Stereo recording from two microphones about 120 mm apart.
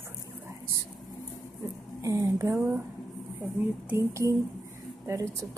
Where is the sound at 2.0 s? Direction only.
25° right (ahead or behind).